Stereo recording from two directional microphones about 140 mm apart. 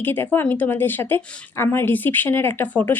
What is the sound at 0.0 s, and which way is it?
Speech, 15° left (ahead or behind).